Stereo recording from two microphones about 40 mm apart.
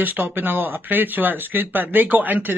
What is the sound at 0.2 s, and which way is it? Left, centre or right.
A man's voice, right.